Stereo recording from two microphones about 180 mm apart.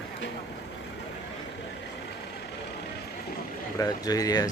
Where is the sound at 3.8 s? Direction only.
20° left (ahead or behind).